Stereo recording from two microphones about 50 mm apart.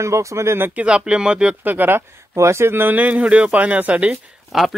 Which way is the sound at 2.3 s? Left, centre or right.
Right.